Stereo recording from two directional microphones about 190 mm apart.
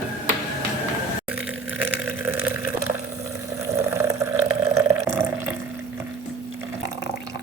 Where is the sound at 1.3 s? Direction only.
10° right (ahead or behind).